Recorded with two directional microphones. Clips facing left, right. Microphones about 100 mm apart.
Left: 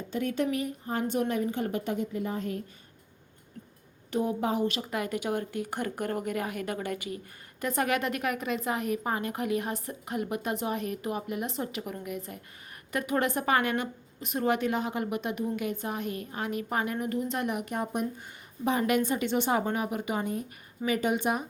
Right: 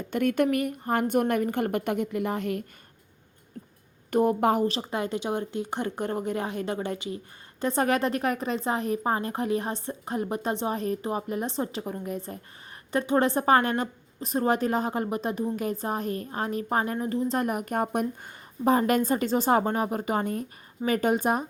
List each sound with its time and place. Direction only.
0.1 s a woman's voice: 65° right (ahead or behind)
4.1 s a woman's voice: 55° right (ahead or behind)
4.6 s a woman's voice: 30° right (ahead or behind)